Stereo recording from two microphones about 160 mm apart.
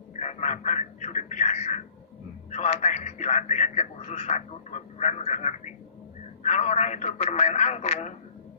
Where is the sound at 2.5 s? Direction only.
45° left (ahead or behind).